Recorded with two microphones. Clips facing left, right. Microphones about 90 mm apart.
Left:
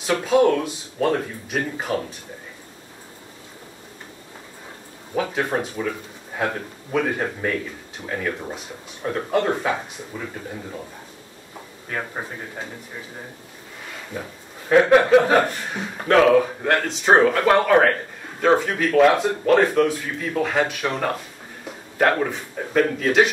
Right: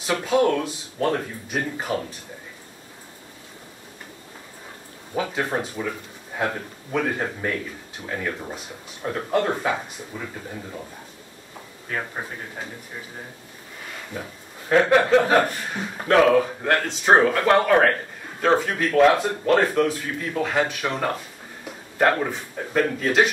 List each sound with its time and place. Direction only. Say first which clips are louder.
0.0 s speech: left 3 dB; centre (ahead or behind)
5.2 s speech: left 2 dB; centre (ahead or behind)
14.7 s chuckle: left 3 dB; 5° left (ahead or behind)
15.7 s speech: left 2 dB; centre (ahead or behind)